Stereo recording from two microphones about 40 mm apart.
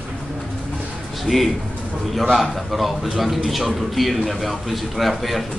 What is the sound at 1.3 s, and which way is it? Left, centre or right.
Speech, right.